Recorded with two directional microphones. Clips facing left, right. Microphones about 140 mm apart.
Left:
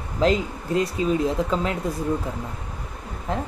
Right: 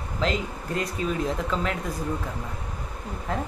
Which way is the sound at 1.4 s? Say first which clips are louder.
Left 3 dB; 35° left (ahead or behind).